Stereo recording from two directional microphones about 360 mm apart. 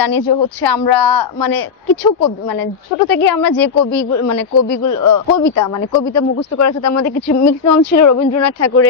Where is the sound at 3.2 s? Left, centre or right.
Left.